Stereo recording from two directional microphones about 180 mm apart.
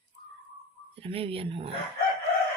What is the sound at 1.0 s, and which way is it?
Speech, 30° right (ahead or behind).